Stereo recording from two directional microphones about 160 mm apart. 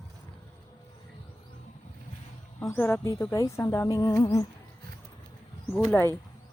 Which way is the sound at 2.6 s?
10° left (ahead or behind).